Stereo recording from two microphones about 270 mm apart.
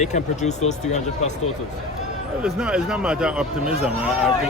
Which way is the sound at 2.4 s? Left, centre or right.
Centre.